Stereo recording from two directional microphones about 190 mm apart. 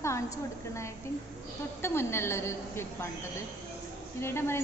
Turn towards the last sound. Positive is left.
turn(degrees=15)  # may be behind; listen again after turning